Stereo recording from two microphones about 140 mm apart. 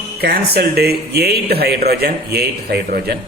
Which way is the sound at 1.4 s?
90° right.